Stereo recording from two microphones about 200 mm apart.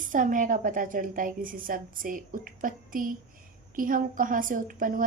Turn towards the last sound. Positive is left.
turn(degrees=-45)  # may be behind; listen again after turning